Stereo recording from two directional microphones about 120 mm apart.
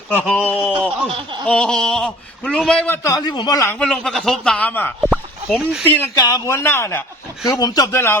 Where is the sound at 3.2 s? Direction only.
35° left (ahead or behind).